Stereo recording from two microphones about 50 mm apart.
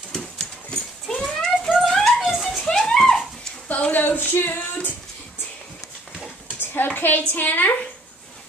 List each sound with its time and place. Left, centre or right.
0.1 s horse: centre
1.2 s a sound: centre
2.6 s music: centre
3.6 s speech: left
6.6 s a sound: left
7.0 s a woman's voice: left